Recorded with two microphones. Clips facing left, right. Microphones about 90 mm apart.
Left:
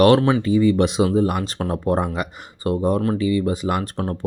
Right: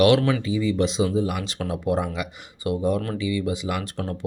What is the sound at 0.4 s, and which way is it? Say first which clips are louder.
Speech: left 6 dB; 55° left (ahead or behind).